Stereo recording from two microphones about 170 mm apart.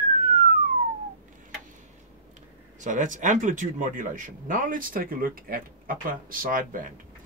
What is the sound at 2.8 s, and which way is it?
Speech, 50° right (ahead or behind).